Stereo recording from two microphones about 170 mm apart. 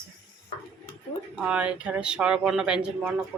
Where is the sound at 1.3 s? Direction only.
5° right (ahead or behind).